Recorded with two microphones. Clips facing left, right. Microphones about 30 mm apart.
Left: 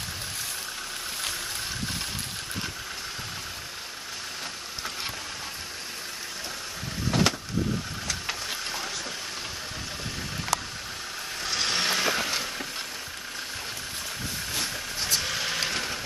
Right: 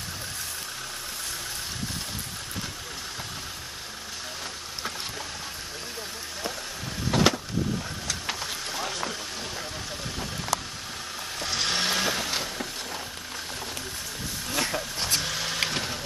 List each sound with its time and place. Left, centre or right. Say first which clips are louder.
7.1 s vehicle: right 2 dB; centre
11.4 s vehicle: even; centre
14.6 s vehicle: right 6 dB; right
15.1 s vehicle: even; centre